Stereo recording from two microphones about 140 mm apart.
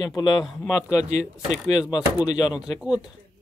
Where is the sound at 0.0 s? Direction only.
30° left (ahead or behind).